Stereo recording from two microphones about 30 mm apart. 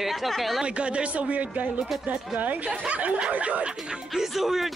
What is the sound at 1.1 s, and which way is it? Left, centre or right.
Speech, right.